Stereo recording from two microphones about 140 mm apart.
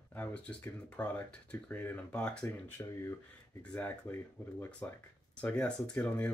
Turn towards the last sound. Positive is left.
turn(degrees=10)  # may be behind; listen again after turning